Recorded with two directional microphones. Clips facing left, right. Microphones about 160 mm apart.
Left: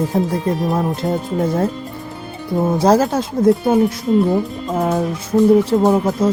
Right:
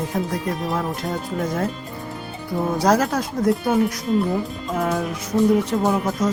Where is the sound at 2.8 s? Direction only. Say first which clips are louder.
Left 4 dB; 25° left (ahead or behind).